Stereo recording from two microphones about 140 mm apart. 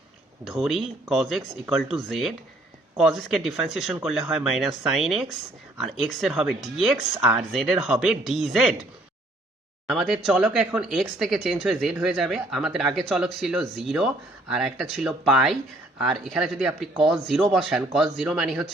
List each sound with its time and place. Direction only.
0.4 s speech: centre (ahead or behind)
7.2 s speech: 15° right (ahead or behind)
7.5 s speech: centre (ahead or behind)
9.9 s speech: centre (ahead or behind)